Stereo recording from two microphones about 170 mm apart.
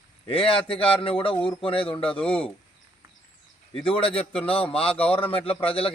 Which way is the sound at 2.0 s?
10° left (ahead or behind).